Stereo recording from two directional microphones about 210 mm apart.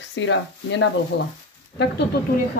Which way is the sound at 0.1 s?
60° left (ahead or behind).